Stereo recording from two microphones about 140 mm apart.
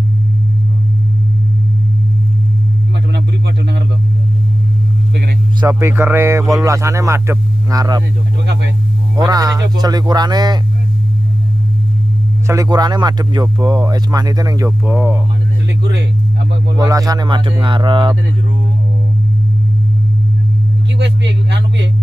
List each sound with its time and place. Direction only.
5.6 s speech: 20° right (ahead or behind)
9.1 s speech: 30° right (ahead or behind)
12.4 s speech: 25° right (ahead or behind)
14.9 s speech: 10° right (ahead or behind)
16.7 s speech: 25° right (ahead or behind)